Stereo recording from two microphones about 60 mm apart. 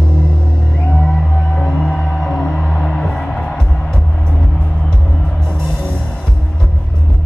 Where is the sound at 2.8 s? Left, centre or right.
Centre.